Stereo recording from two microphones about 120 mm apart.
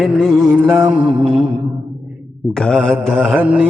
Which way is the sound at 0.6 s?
10° right (ahead or behind).